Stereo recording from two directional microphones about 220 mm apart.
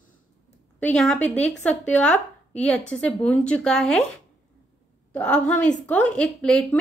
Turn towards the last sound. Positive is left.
turn(degrees=5)  # may be behind; listen again after turning